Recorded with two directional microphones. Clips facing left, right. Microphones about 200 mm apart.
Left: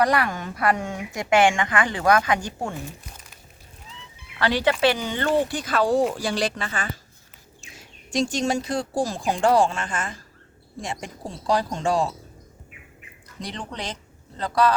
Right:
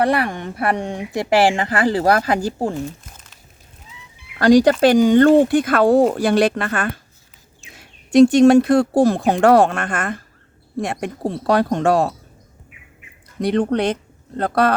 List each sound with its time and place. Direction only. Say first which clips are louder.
0.0 s a woman's voice: right 3 dB; 30° right (ahead or behind)
4.4 s speech: right 10 dB; 45° right (ahead or behind); by 12.1 s 60° right (ahead or behind)
13.4 s speech: right 16 dB; 60° right (ahead or behind)